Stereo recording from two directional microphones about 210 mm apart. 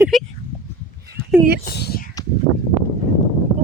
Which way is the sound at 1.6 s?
50° left (ahead or behind).